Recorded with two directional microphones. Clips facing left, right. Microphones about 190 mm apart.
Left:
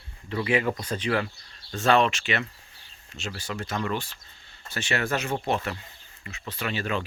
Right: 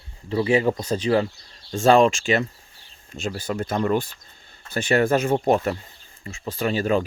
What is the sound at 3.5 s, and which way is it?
Speech, 35° right (ahead or behind).